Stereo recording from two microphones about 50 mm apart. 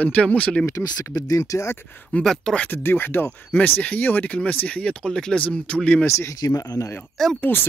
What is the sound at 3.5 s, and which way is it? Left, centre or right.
Speech, left.